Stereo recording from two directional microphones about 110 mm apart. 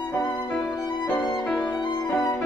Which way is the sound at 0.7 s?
35° left (ahead or behind).